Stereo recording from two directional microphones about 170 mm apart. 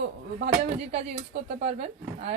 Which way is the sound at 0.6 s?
40° right (ahead or behind).